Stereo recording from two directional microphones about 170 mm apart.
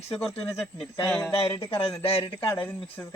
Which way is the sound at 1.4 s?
35° left (ahead or behind).